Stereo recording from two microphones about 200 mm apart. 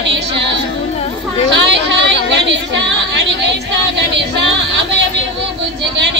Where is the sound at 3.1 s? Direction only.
60° right (ahead or behind).